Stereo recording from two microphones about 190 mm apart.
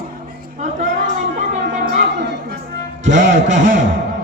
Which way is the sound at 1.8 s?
60° right (ahead or behind).